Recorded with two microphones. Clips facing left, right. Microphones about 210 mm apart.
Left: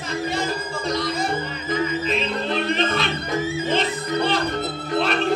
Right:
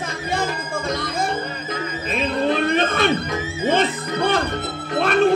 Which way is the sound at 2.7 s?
50° right (ahead or behind).